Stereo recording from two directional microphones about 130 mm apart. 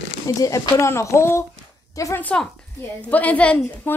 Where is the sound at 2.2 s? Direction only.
10° left (ahead or behind).